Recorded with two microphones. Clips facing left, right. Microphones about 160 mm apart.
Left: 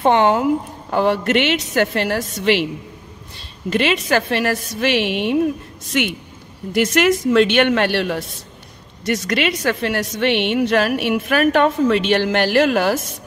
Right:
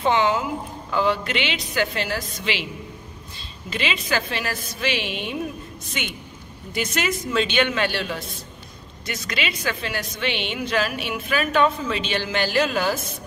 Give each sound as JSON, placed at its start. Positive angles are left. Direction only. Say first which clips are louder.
{"t": 0.0, "sound": "a woman's voice", "louder": "left 6 dB", "side_deg": 60}
{"t": 3.7, "sound": "a woman's voice", "louder": "left 8 dB", "side_deg": 65}
{"t": 6.7, "sound": "speech", "louder": "left 10 dB", "side_deg": 85}
{"t": 7.2, "sound": "a woman's voice", "louder": "left 8 dB", "side_deg": 70}
{"t": 9.3, "sound": "a woman's voice", "louder": "left 6 dB", "side_deg": 65}